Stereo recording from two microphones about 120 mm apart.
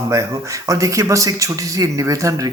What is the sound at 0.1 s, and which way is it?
A man's voice, 25° right (ahead or behind).